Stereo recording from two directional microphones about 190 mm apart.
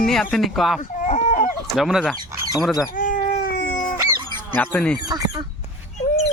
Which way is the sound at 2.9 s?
45° left (ahead or behind).